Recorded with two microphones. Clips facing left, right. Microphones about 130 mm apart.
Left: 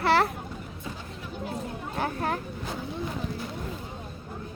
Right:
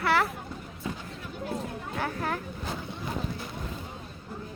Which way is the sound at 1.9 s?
30° left (ahead or behind).